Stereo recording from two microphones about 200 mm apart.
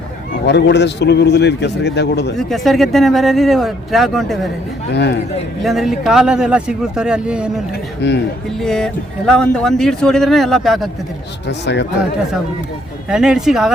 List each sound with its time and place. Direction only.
0.4 s a man's voice: 60° left (ahead or behind)
2.4 s speech: centre (ahead or behind)
4.9 s a man's voice: 60° left (ahead or behind)
5.6 s speech: centre (ahead or behind)
8.0 s a man's voice: 60° left (ahead or behind)
8.6 s speech: 5° left (ahead or behind)
11.4 s a man's voice: 60° left (ahead or behind)
13.1 s speech: 5° right (ahead or behind)